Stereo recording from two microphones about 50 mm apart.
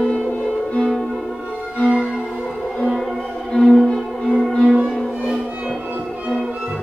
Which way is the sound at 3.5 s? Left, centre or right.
Centre.